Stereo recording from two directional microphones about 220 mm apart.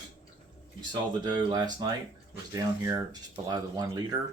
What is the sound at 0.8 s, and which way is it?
Speech, 20° right (ahead or behind).